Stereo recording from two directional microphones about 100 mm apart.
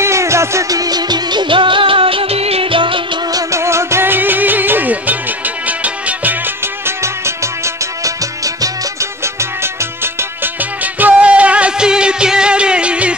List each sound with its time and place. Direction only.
0.0 s music: 30° right (ahead or behind); by 3.0 s 60° right (ahead or behind)
3.3 s music: 30° right (ahead or behind)
7.0 s music: 30° right (ahead or behind)
9.2 s music: 25° right (ahead or behind)
10.4 s music: 15° right (ahead or behind)